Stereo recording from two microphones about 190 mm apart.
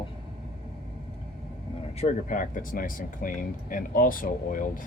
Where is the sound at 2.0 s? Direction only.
45° left (ahead or behind).